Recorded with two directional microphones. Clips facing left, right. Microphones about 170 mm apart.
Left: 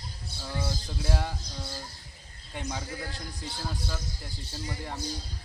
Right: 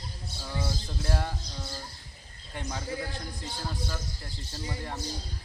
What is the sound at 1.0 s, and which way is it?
Speech, 5° left (ahead or behind).